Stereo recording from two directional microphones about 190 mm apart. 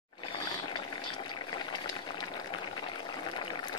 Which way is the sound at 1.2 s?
20° left (ahead or behind).